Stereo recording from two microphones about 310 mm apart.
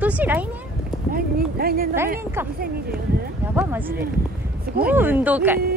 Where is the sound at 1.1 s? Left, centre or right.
Right.